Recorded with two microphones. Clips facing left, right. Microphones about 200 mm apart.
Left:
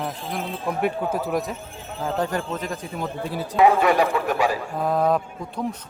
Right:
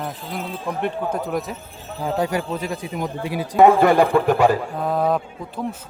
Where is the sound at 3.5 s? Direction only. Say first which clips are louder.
Right 4 dB; 50° right (ahead or behind).